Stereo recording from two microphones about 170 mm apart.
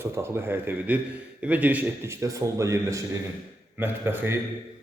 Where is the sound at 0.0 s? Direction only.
15° right (ahead or behind).